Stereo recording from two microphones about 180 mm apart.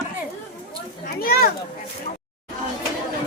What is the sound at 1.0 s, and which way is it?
Speech, 55° left (ahead or behind).